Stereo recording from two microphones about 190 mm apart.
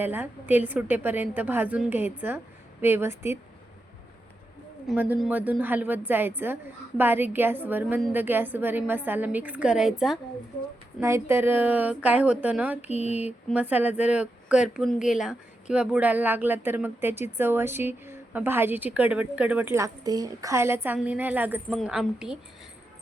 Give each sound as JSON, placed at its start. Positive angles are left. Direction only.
{"t": 0.0, "sound": "speech", "side_deg": -10}
{"t": 4.9, "sound": "speech", "side_deg": -5}
{"t": 11.0, "sound": "speech", "side_deg": -15}
{"t": 12.9, "sound": "a sound", "side_deg": 35}
{"t": 13.1, "sound": "a woman's voice", "side_deg": -10}